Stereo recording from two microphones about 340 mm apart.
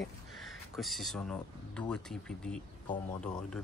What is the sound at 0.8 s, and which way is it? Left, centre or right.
Speech, centre.